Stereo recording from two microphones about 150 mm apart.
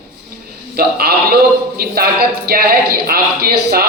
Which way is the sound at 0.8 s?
90° right.